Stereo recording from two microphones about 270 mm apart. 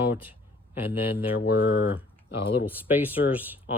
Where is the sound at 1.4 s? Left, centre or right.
Left.